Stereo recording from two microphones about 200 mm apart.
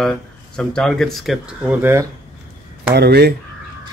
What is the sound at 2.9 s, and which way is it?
Speech, 55° right (ahead or behind).